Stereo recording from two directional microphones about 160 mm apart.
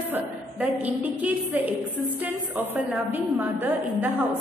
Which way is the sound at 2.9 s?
10° right (ahead or behind).